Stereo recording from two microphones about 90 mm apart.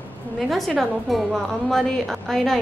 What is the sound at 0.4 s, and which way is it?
A woman's voice, centre (ahead or behind).